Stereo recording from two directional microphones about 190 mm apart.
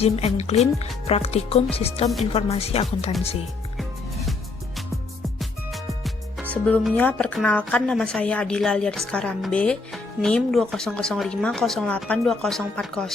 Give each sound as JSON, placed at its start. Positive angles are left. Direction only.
{"t": 0.0, "sound": "speech", "side_deg": 35}
{"t": 5.4, "sound": "music", "side_deg": 0}
{"t": 6.5, "sound": "speech", "side_deg": 5}